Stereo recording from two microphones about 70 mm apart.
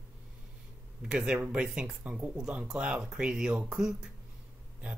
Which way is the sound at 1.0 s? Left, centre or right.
Centre.